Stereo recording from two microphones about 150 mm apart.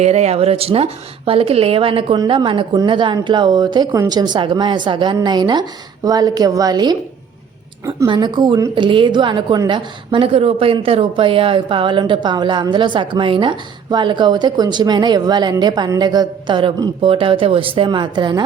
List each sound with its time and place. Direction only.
0.0 s a woman's voice: 45° right (ahead or behind); by 6.9 s 25° right (ahead or behind)
8.0 s a woman's voice: 30° right (ahead or behind)